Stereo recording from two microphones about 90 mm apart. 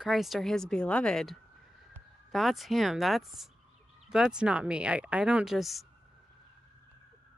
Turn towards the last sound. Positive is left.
turn(degrees=0)  # may be behind; listen again after turning